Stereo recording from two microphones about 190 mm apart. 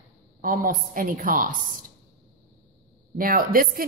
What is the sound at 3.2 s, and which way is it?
Speech, 50° right (ahead or behind).